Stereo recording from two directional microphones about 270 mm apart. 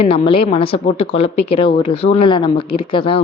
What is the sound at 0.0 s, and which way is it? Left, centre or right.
A woman's voice, centre.